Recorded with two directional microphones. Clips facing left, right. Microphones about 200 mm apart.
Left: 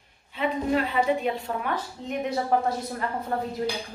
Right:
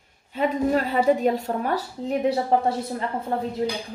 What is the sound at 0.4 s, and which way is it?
A woman's voice, 40° right (ahead or behind).